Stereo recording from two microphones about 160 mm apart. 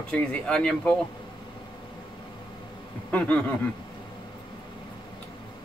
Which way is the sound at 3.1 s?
10° left (ahead or behind).